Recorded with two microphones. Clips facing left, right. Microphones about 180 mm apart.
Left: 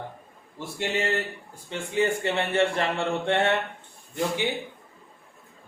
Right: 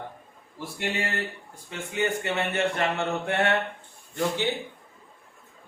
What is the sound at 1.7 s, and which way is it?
Mantra, 30° left (ahead or behind).